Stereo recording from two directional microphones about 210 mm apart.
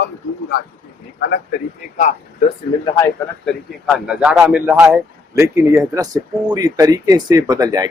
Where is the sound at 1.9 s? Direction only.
35° left (ahead or behind).